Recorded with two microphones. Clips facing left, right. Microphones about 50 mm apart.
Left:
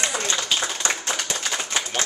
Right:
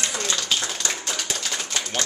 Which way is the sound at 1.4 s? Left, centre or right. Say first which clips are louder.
Left 2 dB; left.